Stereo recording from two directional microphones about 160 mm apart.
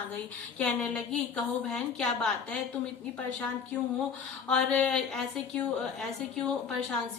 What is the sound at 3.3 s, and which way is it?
A woman's voice, 10° left (ahead or behind).